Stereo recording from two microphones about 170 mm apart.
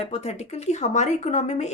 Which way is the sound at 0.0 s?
40° left (ahead or behind).